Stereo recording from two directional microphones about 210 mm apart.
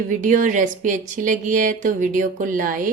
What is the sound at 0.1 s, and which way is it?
Speech, 35° right (ahead or behind).